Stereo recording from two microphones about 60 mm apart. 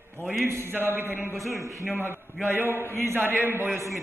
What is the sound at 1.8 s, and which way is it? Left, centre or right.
A man's voice, right.